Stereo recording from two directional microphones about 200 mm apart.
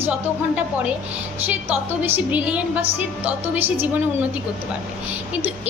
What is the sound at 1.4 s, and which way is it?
A woman's voice, 10° right (ahead or behind).